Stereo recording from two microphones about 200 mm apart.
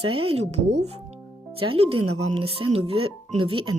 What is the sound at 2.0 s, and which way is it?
Speech, 90° right.